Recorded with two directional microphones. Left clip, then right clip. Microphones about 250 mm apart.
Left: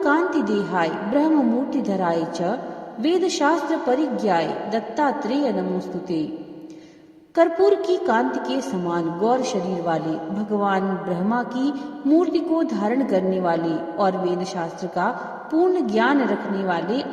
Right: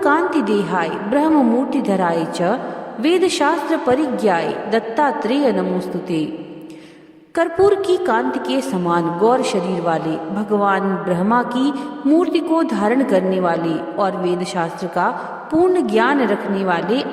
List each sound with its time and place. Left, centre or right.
0.0 s a woman's voice: right
7.3 s a woman's voice: right